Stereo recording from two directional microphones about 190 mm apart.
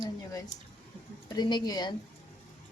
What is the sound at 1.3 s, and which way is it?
Speech, 20° left (ahead or behind).